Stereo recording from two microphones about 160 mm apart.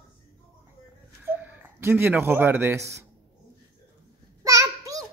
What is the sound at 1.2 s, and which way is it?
Speech, 10° right (ahead or behind).